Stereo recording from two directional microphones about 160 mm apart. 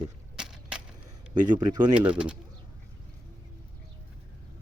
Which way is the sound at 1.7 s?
25° right (ahead or behind).